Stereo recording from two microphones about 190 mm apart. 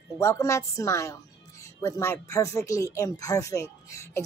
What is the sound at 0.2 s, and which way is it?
A woman's voice, 15° left (ahead or behind).